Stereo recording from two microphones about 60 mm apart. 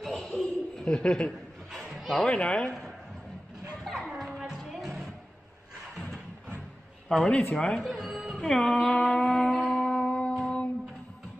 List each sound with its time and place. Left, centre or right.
0.0 s chuckle: centre
0.3 s chuckle: centre
2.0 s a sound: centre
2.2 s speech: centre
3.8 s children playing: centre
4.3 s music: centre
7.1 s speech: centre
7.8 s speech: centre
8.5 s a sound: centre